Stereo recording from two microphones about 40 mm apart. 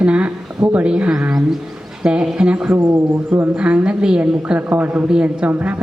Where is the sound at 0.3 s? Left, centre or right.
Right.